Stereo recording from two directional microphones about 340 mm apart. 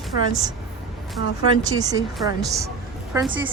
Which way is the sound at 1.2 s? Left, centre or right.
Left.